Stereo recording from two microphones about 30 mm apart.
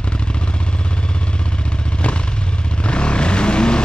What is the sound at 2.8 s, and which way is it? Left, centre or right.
Vehicle, left.